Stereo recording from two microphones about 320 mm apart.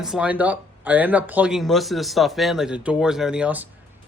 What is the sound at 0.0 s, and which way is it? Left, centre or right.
Speech, centre.